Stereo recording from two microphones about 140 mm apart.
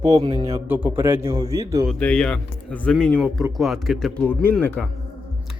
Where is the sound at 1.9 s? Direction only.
5° left (ahead or behind).